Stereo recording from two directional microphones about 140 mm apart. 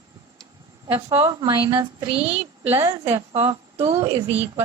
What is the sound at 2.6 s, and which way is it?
Speech, 15° right (ahead or behind).